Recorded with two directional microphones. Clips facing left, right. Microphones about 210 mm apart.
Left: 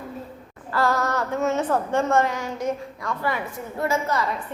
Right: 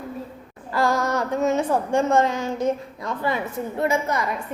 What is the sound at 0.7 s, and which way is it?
A woman's voice, 15° right (ahead or behind).